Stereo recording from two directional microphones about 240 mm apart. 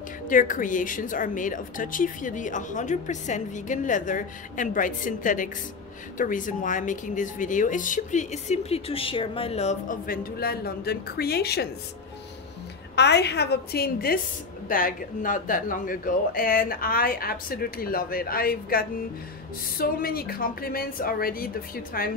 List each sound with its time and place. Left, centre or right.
0.3 s speech: left
12.9 s speech: left